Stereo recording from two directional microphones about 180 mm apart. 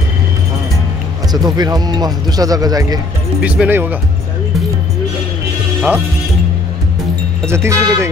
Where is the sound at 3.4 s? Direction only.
5° right (ahead or behind).